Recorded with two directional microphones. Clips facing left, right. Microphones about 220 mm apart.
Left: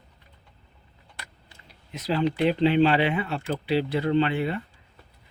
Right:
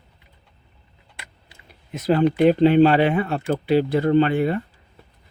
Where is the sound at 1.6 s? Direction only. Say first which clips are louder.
Right 9 dB; 50° right (ahead or behind).